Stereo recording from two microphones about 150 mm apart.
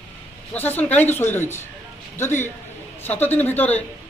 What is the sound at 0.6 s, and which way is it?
A man's voice, 15° left (ahead or behind).